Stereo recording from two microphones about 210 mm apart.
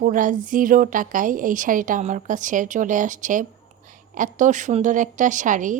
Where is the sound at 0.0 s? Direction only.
40° right (ahead or behind).